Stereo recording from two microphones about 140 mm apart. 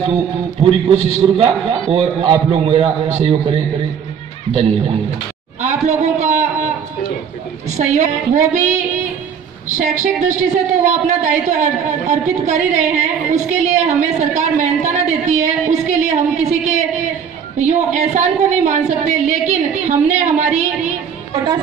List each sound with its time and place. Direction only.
0.6 s a man's voice: 40° right (ahead or behind)
5.6 s a sound: 55° right (ahead or behind)
7.7 s a woman's voice: 55° right (ahead or behind)
10.2 s a woman's voice: 60° right (ahead or behind)